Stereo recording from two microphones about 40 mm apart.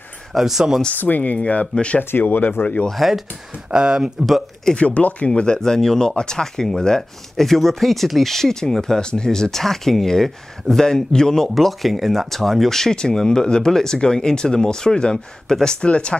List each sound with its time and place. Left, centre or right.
0.3 s speech: centre
1.0 s speech: left
2.2 s speech: left
2.9 s speech: centre
3.7 s speech: right
4.7 s speech: left
5.3 s speech: left
11.5 s speech: centre; by 16.2 s left